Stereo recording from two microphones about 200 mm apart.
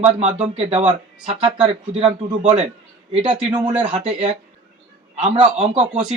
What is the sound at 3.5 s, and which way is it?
Speech, 20° right (ahead or behind).